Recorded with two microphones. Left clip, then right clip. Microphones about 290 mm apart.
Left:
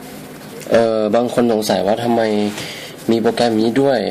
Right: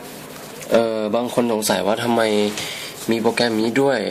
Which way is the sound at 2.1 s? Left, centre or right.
Centre.